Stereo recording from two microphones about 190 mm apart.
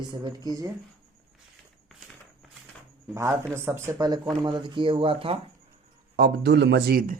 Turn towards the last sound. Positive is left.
turn(degrees=-50)  # may be behind; listen again after turning